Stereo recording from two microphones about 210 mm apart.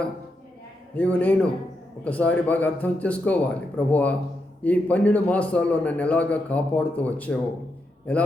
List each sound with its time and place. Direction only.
0.9 s a man's voice: 5° left (ahead or behind)